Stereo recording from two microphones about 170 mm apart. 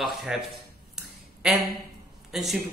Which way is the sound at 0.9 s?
Centre (ahead or behind).